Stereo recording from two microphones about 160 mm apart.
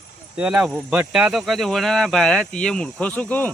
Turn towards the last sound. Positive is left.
turn(degrees=10)  # may be behind; listen again after turning